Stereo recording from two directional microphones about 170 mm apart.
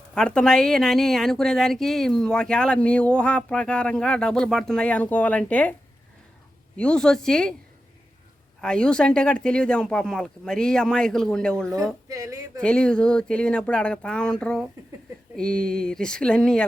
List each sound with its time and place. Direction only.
0.1 s a woman's voice: 5° left (ahead or behind)
6.7 s a woman's voice: 5° left (ahead or behind)
8.6 s a woman's voice: 5° left (ahead or behind)
12.0 s speech: 20° right (ahead or behind)
12.6 s a woman's voice: 5° left (ahead or behind)